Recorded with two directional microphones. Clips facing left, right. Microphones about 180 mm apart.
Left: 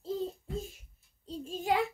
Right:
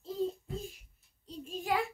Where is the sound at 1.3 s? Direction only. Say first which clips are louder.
Left 4 dB; 25° left (ahead or behind).